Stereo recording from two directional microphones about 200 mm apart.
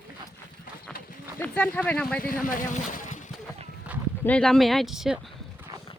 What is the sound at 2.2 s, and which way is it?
Speech, 45° left (ahead or behind).